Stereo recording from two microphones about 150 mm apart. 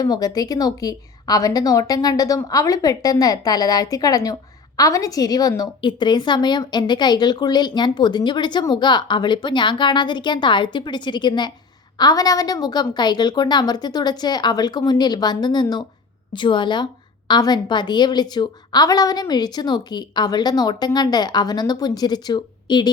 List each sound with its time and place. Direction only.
0.0 s a woman's voice: 25° left (ahead or behind)